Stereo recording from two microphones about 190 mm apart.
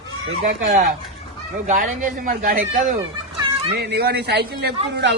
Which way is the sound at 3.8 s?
60° right (ahead or behind).